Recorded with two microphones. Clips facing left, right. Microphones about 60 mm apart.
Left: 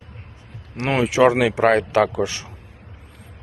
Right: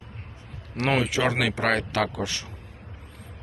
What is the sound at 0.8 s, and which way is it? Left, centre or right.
Speech, centre.